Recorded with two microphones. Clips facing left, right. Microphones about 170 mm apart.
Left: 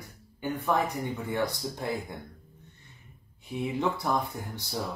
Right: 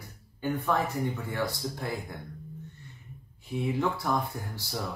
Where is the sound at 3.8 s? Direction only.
20° left (ahead or behind).